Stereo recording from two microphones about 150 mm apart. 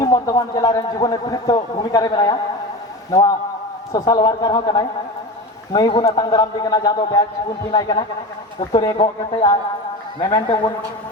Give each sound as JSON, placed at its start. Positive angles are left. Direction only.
{"t": 0.0, "sound": "a man's voice", "side_deg": 25}